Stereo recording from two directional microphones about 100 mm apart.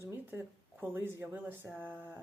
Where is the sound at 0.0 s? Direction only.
20° right (ahead or behind).